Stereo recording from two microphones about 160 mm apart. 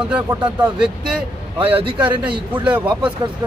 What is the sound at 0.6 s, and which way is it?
Speech, 5° right (ahead or behind).